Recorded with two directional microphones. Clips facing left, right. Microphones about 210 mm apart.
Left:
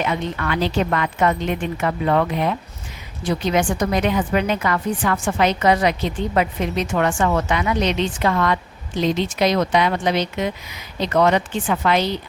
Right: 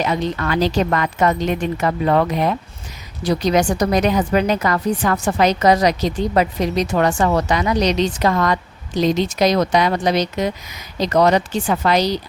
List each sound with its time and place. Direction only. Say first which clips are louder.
0.0 s a woman's voice: right 3 dB; 35° right (ahead or behind)